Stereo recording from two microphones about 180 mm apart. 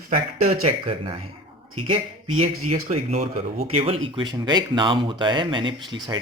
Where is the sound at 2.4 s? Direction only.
35° right (ahead or behind).